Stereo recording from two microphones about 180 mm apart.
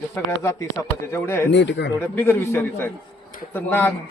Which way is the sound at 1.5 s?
75° left (ahead or behind).